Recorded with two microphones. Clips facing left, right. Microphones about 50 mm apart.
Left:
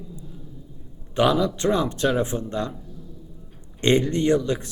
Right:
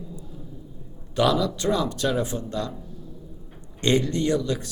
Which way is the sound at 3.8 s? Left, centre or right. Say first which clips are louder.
Left 2 dB; left.